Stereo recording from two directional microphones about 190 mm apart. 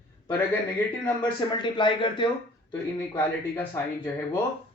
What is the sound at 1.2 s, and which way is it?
Speech, 25° left (ahead or behind).